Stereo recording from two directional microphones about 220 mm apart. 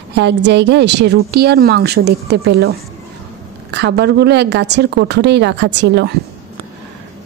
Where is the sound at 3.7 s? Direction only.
50° right (ahead or behind).